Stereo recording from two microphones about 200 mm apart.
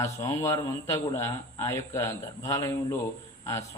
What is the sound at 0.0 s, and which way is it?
A man's voice, 15° left (ahead or behind).